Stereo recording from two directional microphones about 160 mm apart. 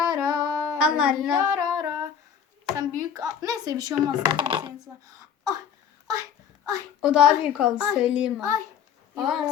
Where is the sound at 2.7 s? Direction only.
20° right (ahead or behind).